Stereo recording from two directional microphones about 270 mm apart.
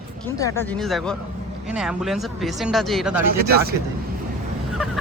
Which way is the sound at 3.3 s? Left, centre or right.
Right.